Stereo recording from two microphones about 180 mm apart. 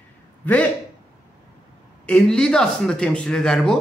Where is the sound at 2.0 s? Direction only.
5° left (ahead or behind).